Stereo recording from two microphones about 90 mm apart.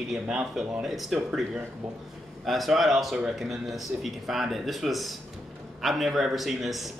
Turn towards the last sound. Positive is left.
turn(degrees=0)  # may be behind; listen again after turning